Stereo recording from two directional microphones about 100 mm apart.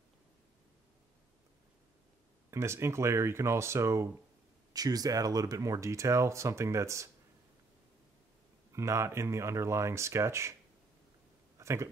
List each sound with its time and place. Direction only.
2.5 s speech: 25° right (ahead or behind)
4.7 s speech: 40° right (ahead or behind)
8.7 s speech: 30° right (ahead or behind)
11.5 s speech: 30° right (ahead or behind)